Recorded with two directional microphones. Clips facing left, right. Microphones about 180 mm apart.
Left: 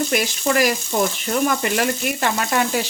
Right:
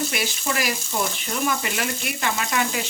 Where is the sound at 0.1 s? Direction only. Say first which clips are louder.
Left 7 dB; 45° left (ahead or behind).